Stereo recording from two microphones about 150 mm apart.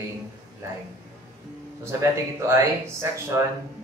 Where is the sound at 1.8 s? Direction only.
20° right (ahead or behind).